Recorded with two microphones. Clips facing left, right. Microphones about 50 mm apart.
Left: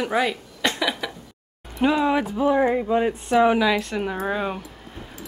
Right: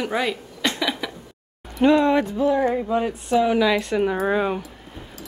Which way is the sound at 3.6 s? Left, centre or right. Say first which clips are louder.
Right 2 dB; centre.